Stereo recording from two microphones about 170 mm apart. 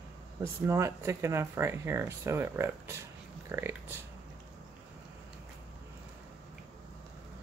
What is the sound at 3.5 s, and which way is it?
Dog, 15° right (ahead or behind).